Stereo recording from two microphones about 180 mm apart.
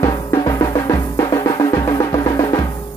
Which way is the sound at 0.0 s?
20° left (ahead or behind).